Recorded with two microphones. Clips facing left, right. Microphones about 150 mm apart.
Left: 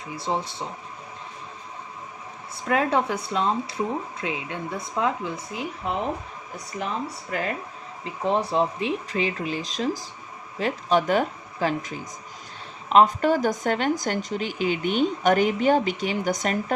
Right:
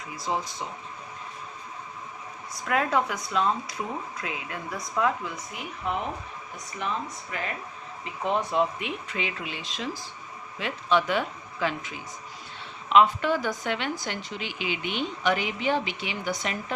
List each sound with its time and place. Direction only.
0.2 s speech: 30° left (ahead or behind)
2.6 s speech: 30° left (ahead or behind); by 16.7 s 45° left (ahead or behind)